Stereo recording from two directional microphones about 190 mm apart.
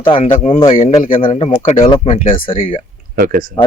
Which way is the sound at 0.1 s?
30° left (ahead or behind).